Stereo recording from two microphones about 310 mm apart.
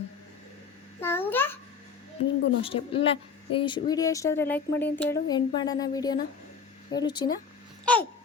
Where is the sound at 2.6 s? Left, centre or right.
Centre.